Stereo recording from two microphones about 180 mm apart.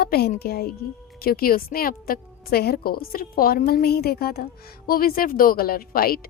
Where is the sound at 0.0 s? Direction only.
60° left (ahead or behind).